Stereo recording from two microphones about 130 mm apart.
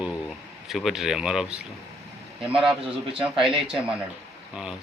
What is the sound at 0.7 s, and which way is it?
Speech, centre (ahead or behind).